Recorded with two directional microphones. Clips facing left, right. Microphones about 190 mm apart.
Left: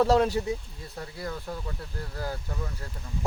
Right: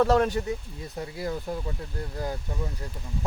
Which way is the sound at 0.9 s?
20° right (ahead or behind).